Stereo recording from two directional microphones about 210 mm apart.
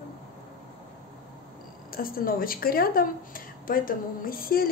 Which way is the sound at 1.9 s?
45° left (ahead or behind).